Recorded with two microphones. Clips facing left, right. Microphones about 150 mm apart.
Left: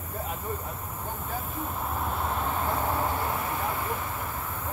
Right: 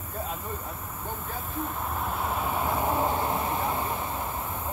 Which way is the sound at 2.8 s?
20° right (ahead or behind).